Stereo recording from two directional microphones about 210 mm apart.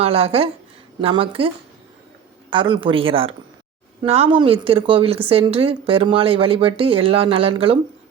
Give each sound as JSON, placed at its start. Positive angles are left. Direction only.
{"t": 0.0, "sound": "a woman's voice", "side_deg": -25}
{"t": 2.5, "sound": "a woman's voice", "side_deg": -20}